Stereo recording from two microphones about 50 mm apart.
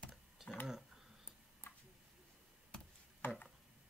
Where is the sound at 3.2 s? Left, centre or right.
Left.